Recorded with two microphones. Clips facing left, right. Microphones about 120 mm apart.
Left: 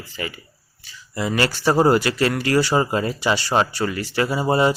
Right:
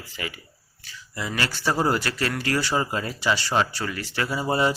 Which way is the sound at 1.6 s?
40° left (ahead or behind).